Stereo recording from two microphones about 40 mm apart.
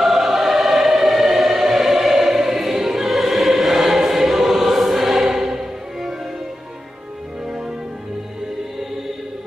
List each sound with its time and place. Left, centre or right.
0.0 s choir: centre
7.4 s music: centre